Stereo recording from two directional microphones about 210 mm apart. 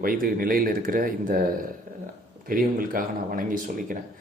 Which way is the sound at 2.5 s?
40° right (ahead or behind).